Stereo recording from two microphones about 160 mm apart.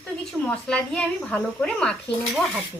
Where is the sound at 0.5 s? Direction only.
5° left (ahead or behind).